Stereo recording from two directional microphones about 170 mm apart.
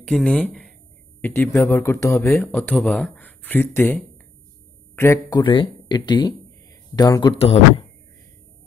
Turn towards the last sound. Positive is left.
turn(degrees=35)  # may be behind; listen again after turning